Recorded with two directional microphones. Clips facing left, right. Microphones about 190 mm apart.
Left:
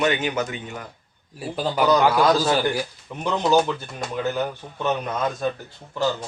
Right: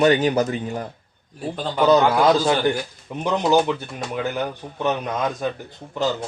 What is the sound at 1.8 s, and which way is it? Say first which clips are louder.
A man's voice: right 3 dB; 25° right (ahead or behind).